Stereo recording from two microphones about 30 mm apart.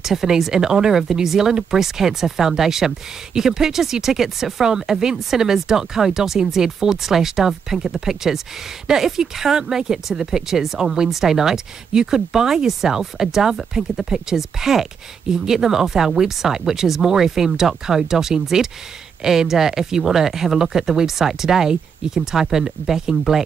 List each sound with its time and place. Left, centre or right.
0.0 s speech: centre